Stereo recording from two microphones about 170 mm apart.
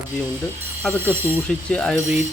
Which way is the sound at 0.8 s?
5° left (ahead or behind).